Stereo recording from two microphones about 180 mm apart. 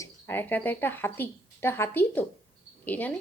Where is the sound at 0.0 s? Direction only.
10° left (ahead or behind).